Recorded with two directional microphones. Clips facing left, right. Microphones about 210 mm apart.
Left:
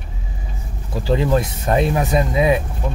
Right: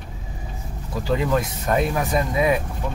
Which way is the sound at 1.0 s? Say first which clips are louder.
Left 4 dB; 30° left (ahead or behind).